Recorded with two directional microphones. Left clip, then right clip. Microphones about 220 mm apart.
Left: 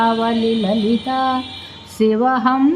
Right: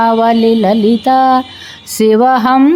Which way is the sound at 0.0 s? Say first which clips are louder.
Right 7 dB; 50° right (ahead or behind).